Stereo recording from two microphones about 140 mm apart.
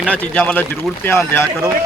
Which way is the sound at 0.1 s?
10° left (ahead or behind).